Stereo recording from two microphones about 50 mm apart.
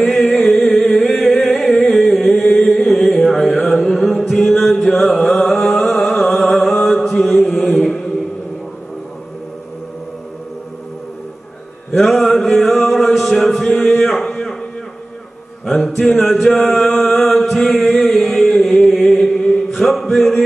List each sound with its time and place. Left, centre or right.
0.0 s music: centre
2.5 s chant: centre
3.3 s mantra: centre
5.2 s music: centre
5.5 s a sound: centre
5.9 s mantra: centre
11.9 s chant: centre
13.8 s a sound: centre
15.6 s mantra: centre
16.0 s chant: centre
19.8 s music: centre